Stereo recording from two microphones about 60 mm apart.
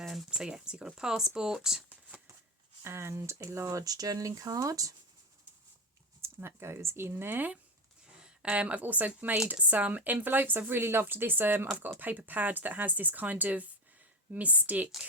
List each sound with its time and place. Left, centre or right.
0.0 s a sound: centre
0.3 s speech: centre
2.8 s speech: right
6.2 s speech: right
8.2 s a woman's voice: centre